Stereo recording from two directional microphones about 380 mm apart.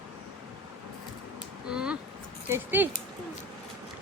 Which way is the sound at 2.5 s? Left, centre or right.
Centre.